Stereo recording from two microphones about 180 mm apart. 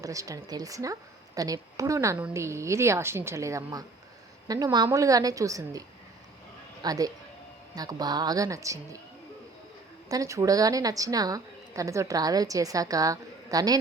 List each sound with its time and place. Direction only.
0.0 s a woman's voice: 20° right (ahead or behind)
6.8 s a woman's voice: 20° right (ahead or behind)
10.1 s a woman's voice: 20° right (ahead or behind)